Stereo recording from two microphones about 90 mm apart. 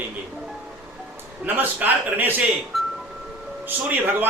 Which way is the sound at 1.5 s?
20° right (ahead or behind).